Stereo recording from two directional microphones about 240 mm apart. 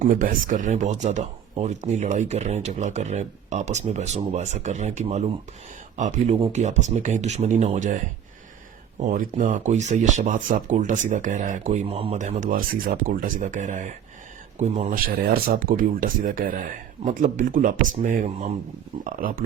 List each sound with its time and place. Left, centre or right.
0.0 s speech: right